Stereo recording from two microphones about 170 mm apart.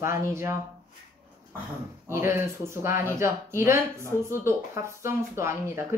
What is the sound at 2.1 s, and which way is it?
Speech, 15° right (ahead or behind).